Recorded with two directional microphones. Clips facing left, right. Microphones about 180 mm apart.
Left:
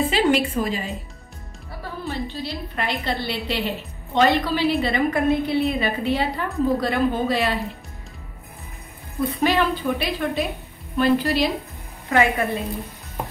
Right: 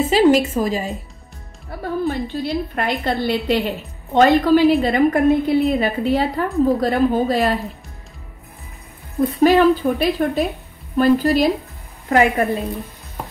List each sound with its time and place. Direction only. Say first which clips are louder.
0.1 s a woman's voice: right 6 dB; 40° right (ahead or behind)
9.4 s a woman's voice: right 9 dB; 40° right (ahead or behind)